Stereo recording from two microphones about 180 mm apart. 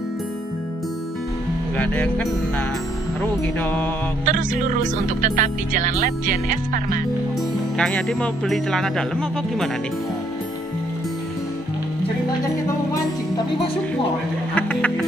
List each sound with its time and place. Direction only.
1.8 s music: 10° left (ahead or behind)
4.3 s speech: 45° right (ahead or behind)
7.7 s speech: 5° left (ahead or behind)
14.5 s music: 5° left (ahead or behind)